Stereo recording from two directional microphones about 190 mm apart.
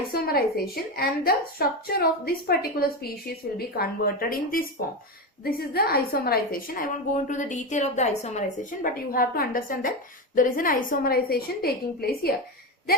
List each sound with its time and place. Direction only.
0.1 s a woman's voice: 55° left (ahead or behind)